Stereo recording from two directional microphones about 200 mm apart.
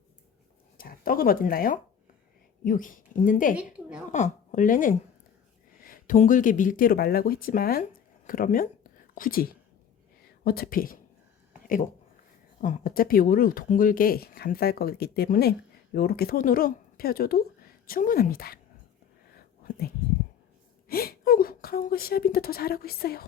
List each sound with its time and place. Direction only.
0.8 s speech: 45° left (ahead or behind)
3.5 s a woman's voice: 5° right (ahead or behind)
4.1 s a woman's voice: 40° left (ahead or behind)
12.6 s speech: 40° left (ahead or behind)
19.3 s whispering: 50° left (ahead or behind)
20.8 s speech: 50° left (ahead or behind)